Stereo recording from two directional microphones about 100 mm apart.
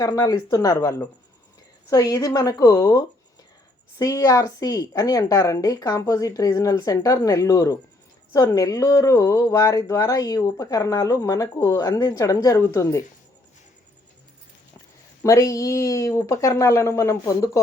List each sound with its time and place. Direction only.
0.0 s a woman's voice: 35° left (ahead or behind)
15.2 s a woman's voice: 35° left (ahead or behind)